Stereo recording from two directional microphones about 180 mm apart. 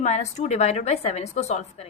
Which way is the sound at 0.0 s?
40° left (ahead or behind).